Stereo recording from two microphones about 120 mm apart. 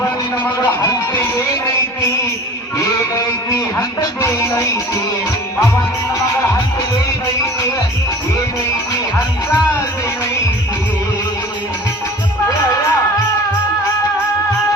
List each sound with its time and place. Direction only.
3.8 s music: 25° left (ahead or behind)
12.5 s music: 25° left (ahead or behind)